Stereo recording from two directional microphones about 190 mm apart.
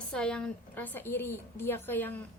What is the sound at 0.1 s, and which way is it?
A woman's voice, 5° left (ahead or behind).